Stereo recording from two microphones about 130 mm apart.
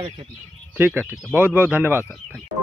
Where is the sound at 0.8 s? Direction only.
15° right (ahead or behind).